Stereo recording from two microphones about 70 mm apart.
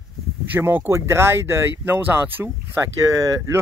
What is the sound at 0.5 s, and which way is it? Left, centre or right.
Speech, right.